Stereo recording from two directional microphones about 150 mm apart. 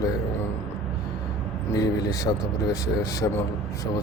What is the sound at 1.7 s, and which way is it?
Speech, 25° left (ahead or behind).